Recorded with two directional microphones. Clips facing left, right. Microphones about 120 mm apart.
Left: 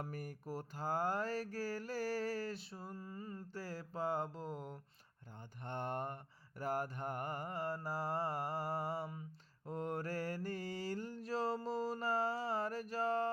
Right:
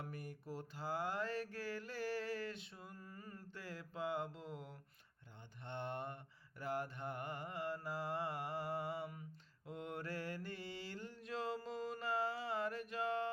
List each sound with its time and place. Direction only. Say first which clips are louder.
0.0 s mantra: left 4 dB; 45° left (ahead or behind); by 3.4 s 25° left (ahead or behind)
3.5 s mantra: left 3 dB; 35° left (ahead or behind)